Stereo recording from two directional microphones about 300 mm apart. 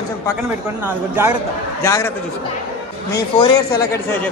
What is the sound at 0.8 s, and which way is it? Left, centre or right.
Speech, centre.